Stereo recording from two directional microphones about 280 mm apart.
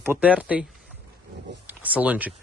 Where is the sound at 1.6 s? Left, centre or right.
Centre.